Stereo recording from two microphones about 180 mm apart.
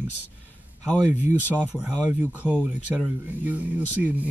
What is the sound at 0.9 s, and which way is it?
Speech, 10° left (ahead or behind).